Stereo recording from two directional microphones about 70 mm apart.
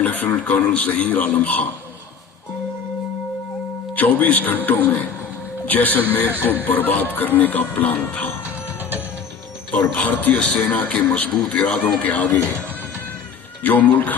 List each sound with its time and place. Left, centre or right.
0.0 s speech: left
3.9 s speech: left
9.9 s speech: centre